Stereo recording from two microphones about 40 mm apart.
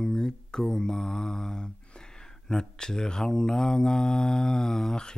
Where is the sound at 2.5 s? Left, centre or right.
Centre.